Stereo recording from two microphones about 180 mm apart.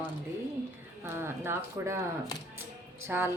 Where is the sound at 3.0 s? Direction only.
15° right (ahead or behind).